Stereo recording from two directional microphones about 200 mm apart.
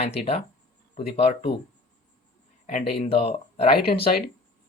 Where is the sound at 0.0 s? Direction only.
30° left (ahead or behind).